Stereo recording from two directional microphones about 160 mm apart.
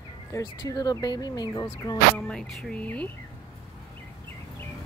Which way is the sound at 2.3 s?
5° left (ahead or behind).